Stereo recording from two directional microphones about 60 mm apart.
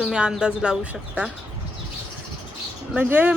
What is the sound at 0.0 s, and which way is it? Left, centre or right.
Speech, centre.